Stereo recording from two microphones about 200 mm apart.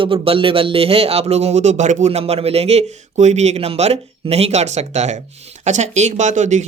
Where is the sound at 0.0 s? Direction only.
25° right (ahead or behind).